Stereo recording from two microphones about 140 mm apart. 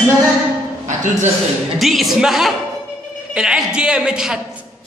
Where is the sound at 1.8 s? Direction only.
Centre (ahead or behind).